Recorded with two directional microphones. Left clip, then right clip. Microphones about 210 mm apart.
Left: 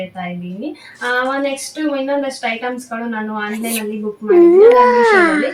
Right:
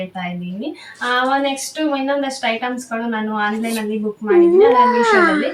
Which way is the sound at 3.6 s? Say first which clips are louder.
Even; 20° left (ahead or behind).